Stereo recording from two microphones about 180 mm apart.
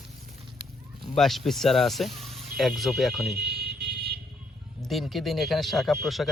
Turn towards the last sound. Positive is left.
turn(degrees=0)  # may be behind; listen again after turning